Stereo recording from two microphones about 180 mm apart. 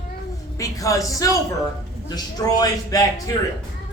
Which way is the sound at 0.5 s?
20° left (ahead or behind).